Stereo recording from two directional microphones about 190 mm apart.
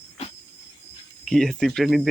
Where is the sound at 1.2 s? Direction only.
Centre (ahead or behind).